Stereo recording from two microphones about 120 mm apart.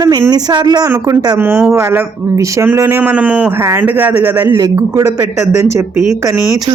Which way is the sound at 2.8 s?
15° right (ahead or behind).